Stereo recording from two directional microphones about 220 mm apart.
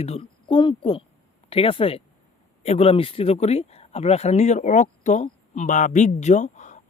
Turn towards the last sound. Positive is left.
turn(degrees=35)  # may be behind; listen again after turning